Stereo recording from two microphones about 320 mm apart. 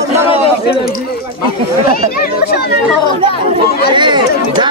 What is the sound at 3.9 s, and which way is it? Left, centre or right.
Speech, centre.